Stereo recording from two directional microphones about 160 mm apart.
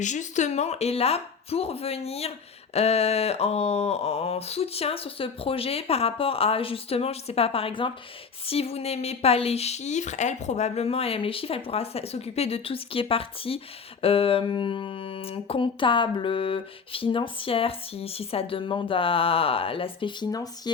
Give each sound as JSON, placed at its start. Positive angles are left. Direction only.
{"t": 0.0, "sound": "speech", "side_deg": 50}